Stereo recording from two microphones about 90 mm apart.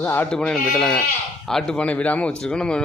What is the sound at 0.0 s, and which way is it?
Speech, 25° left (ahead or behind).